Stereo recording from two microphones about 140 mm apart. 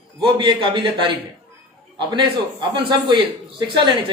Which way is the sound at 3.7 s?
35° right (ahead or behind).